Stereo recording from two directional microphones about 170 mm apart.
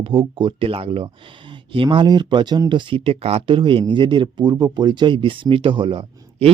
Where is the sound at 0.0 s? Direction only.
30° right (ahead or behind).